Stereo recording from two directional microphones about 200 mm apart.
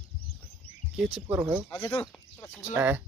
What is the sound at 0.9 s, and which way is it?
Speech, 5° right (ahead or behind).